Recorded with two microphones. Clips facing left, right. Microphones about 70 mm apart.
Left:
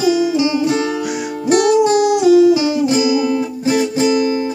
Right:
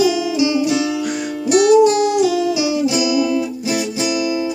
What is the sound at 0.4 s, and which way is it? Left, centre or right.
Music, left.